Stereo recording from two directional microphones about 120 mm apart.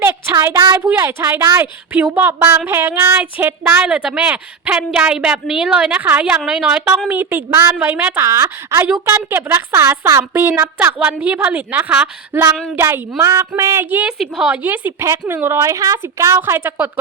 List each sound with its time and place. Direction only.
0.0 s child singing: 20° right (ahead or behind)
0.8 s a woman's voice: 20° right (ahead or behind)
8.2 s a woman's voice: 25° right (ahead or behind)
14.2 s a woman's voice: 5° right (ahead or behind)